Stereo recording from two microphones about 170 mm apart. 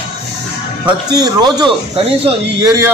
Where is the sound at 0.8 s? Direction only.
25° right (ahead or behind).